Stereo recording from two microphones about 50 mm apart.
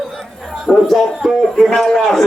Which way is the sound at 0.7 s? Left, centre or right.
Centre.